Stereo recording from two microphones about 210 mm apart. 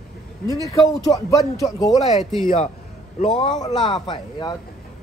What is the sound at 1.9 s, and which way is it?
A man's voice, 30° left (ahead or behind).